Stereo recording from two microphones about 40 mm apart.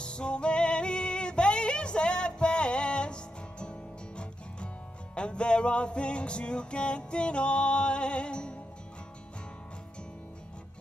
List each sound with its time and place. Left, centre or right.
0.0 s music: left
5.1 s music: left